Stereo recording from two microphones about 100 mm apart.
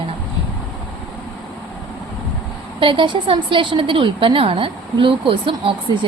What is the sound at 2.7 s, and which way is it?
A woman's voice, 60° right (ahead or behind).